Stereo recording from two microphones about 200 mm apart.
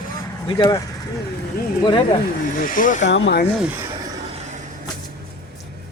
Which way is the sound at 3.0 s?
60° left (ahead or behind).